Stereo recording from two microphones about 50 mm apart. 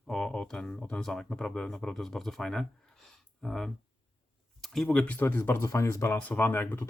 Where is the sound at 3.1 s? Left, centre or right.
Centre.